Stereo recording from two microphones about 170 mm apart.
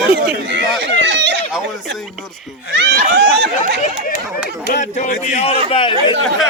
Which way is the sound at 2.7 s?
80° right.